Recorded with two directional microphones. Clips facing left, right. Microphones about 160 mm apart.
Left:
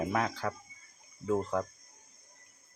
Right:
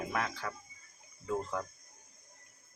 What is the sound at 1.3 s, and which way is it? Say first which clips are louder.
Speech: left 5 dB; 20° left (ahead or behind).